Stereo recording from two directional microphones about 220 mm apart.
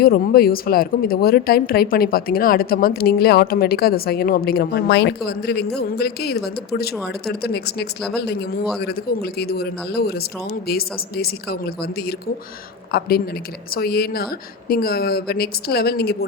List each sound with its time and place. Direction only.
0.0 s speech: 45° left (ahead or behind)